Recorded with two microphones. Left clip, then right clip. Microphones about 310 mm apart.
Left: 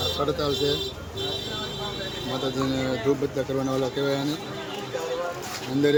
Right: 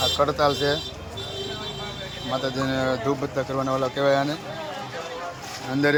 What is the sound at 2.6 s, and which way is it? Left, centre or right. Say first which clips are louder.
Speech: right 4 dB; centre.